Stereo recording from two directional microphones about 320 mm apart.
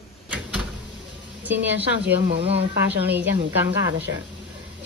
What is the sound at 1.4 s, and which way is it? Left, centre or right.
Speech, centre.